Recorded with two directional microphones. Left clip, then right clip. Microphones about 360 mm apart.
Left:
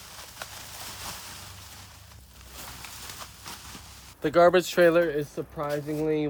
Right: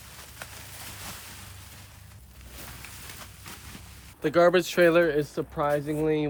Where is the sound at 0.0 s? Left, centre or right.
Centre.